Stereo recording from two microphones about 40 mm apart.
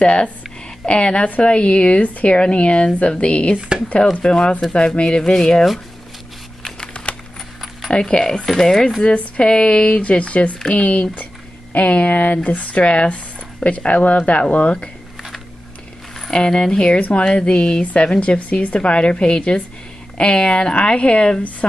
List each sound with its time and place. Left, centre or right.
0.0 s a woman's voice: left
3.5 s speech: right
4.1 s a woman's voice: left
7.9 s speech: left
9.0 s a woman's voice: left
16.3 s a woman's voice: left
17.9 s a woman's voice: left
18.4 s a woman's voice: left